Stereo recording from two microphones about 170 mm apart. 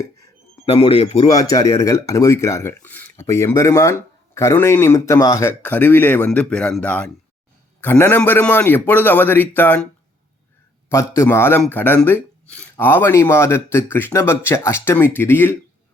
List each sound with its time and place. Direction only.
0.6 s a man's voice: 35° left (ahead or behind)
1.3 s a man's voice: 20° left (ahead or behind)